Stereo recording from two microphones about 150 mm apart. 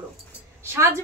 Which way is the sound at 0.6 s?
15° right (ahead or behind).